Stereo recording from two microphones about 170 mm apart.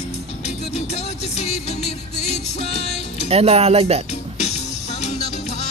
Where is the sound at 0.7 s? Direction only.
40° left (ahead or behind).